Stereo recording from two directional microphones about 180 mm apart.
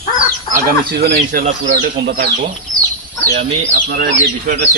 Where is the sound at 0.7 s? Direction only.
60° right (ahead or behind).